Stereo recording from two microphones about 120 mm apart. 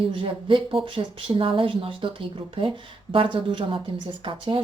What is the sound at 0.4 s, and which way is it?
Speech, 45° right (ahead or behind).